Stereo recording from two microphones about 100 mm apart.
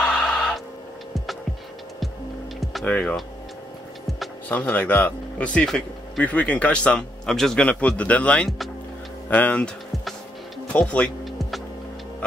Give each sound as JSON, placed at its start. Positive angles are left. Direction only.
{"t": 0.0, "sound": "a sound", "side_deg": 10}
{"t": 2.8, "sound": "speech", "side_deg": 15}
{"t": 4.5, "sound": "speech", "side_deg": 15}
{"t": 7.6, "sound": "speech", "side_deg": 15}
{"t": 10.7, "sound": "speech", "side_deg": 15}
{"t": 11.2, "sound": "music", "side_deg": 0}